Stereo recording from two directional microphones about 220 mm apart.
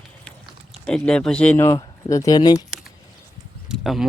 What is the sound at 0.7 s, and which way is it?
Speech, 5° left (ahead or behind).